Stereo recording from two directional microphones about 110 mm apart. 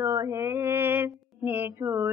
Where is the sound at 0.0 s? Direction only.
25° right (ahead or behind).